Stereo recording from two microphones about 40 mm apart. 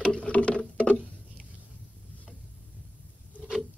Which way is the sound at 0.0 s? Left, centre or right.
Left.